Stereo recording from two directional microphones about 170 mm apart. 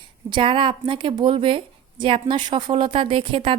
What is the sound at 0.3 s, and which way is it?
A woman's voice, 30° right (ahead or behind).